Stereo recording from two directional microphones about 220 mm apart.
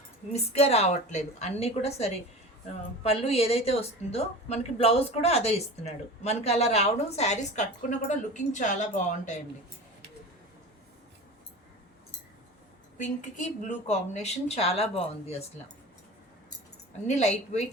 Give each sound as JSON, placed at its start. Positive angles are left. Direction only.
{"t": 0.3, "sound": "a woman's voice", "side_deg": 30}
{"t": 13.7, "sound": "a woman's voice", "side_deg": 30}
{"t": 17.1, "sound": "a woman's voice", "side_deg": 30}